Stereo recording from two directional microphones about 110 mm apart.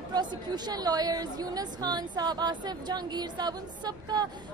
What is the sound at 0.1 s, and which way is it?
A woman's voice, 40° right (ahead or behind).